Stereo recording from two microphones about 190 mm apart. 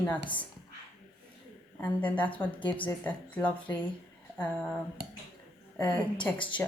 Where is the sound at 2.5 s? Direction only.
25° left (ahead or behind).